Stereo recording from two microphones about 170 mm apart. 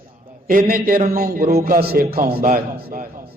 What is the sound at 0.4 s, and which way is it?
A man's voice, 55° right (ahead or behind).